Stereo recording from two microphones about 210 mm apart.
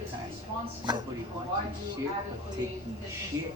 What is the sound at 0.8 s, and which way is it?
Speech, 20° right (ahead or behind).